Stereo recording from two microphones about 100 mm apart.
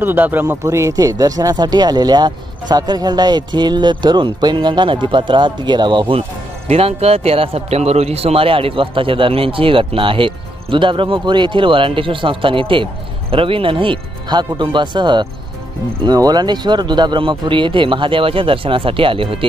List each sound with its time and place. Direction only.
0.0 s speech: 20° right (ahead or behind)
0.7 s speech: 30° right (ahead or behind); by 6.2 s 55° right (ahead or behind)
6.7 s speech: 85° right; by 19.4 s 65° right (ahead or behind)